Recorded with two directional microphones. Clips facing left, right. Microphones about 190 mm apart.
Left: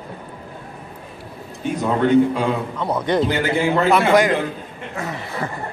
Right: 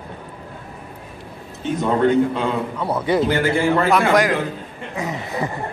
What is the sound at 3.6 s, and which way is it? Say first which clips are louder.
Speech: left 1 dB; 15° left (ahead or behind).